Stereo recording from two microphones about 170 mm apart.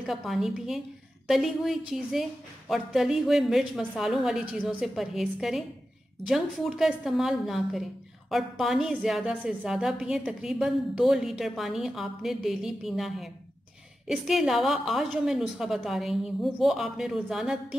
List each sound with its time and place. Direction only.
0.0 s a woman's voice: centre (ahead or behind)